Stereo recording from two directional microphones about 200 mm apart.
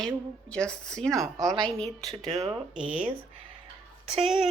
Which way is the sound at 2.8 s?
5° right (ahead or behind).